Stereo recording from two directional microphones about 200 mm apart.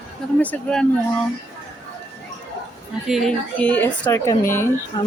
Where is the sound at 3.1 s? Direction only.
Centre (ahead or behind).